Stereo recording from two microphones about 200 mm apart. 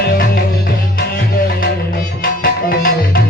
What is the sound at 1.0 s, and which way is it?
Music, 50° left (ahead or behind).